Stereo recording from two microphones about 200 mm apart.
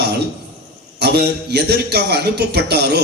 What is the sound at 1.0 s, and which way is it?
A man's voice, 55° right (ahead or behind).